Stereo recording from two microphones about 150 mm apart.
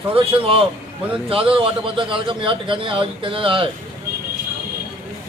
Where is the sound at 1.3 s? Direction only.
40° right (ahead or behind).